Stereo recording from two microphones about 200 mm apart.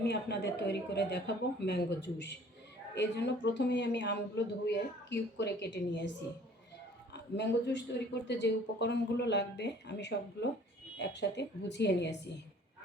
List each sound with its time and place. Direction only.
0.0 s speech: 55° left (ahead or behind)
7.1 s speech: 60° left (ahead or behind)